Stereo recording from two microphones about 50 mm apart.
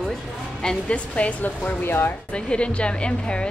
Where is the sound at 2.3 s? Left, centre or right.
Left.